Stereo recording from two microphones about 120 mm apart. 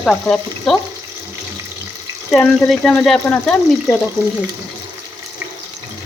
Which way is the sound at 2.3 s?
5° left (ahead or behind).